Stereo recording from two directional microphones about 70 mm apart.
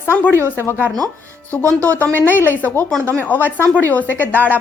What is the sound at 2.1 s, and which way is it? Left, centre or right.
A woman's voice, left.